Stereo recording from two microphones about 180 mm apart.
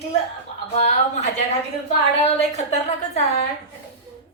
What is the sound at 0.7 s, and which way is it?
A woman's voice, 35° left (ahead or behind).